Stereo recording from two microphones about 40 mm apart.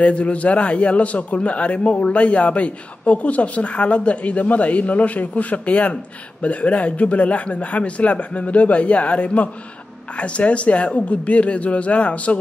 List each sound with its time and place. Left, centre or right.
0.0 s a man's voice: left